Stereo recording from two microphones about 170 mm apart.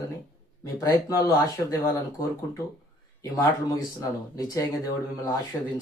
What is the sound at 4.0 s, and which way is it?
Speech, 20° left (ahead or behind).